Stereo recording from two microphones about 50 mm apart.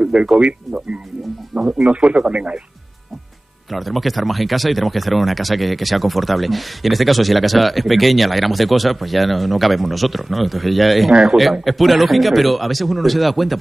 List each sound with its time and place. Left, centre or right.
0.0 s speech: centre
3.7 s speech: centre